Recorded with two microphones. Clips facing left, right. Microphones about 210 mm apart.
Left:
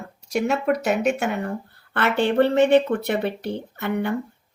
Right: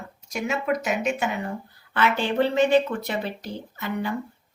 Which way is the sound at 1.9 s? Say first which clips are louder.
Left 3 dB; 65° left (ahead or behind).